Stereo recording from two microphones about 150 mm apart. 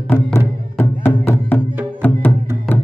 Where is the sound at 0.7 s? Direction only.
15° left (ahead or behind).